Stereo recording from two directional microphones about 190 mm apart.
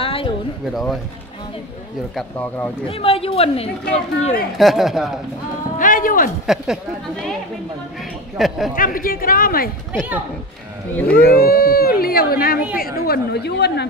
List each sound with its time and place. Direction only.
0.0 s a sound: 30° left (ahead or behind)
2.1 s speech: 10° left (ahead or behind)
2.9 s speech: 30° left (ahead or behind)
4.6 s a woman's voice: centre (ahead or behind)
5.8 s a sound: 45° left (ahead or behind)
6.4 s a woman's voice: centre (ahead or behind)
8.4 s a woman's voice: centre (ahead or behind)
8.7 s speech: 45° left (ahead or behind)
11.2 s speech: 50° left (ahead or behind)